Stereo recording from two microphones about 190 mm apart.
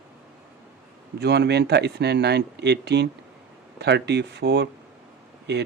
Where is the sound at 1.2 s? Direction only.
60° right (ahead or behind).